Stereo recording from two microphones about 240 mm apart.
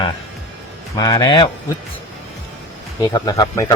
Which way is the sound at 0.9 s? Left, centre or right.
Centre.